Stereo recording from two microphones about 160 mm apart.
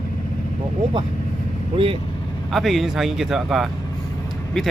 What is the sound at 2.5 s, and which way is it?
Speech, centre (ahead or behind).